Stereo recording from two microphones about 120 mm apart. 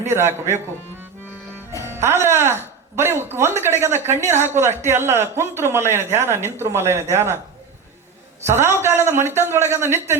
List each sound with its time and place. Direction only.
0.0 s speech: 20° right (ahead or behind)
1.9 s speech: 20° right (ahead or behind)
8.4 s speech: 20° right (ahead or behind)